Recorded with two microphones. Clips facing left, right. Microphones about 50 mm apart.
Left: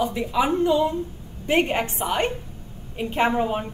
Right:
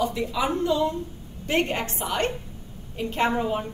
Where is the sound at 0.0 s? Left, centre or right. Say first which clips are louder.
Left 3 dB; centre.